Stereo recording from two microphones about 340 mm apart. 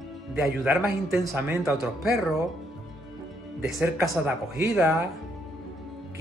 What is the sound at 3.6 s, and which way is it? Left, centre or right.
A man's voice, centre.